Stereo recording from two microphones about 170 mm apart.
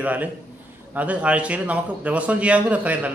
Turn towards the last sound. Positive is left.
turn(degrees=-10)  # may be behind; listen again after turning